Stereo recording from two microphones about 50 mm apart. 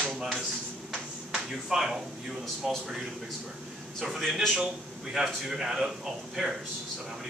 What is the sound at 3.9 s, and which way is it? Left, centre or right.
A man's voice, centre.